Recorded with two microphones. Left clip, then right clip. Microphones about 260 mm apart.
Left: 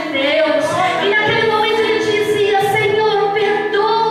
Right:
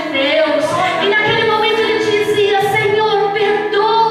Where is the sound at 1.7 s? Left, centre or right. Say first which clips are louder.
Right 1 dB; centre.